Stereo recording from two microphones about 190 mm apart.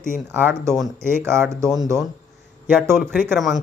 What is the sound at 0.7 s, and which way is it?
Speech, 5° left (ahead or behind).